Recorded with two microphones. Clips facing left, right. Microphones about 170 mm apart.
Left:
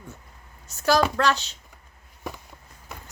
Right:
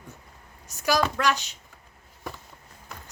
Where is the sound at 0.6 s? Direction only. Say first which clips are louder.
Left 3 dB; 15° right (ahead or behind).